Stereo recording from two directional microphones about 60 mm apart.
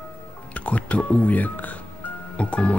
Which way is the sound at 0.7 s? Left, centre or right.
Left.